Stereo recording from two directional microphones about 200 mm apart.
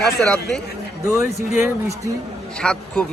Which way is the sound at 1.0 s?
15° right (ahead or behind).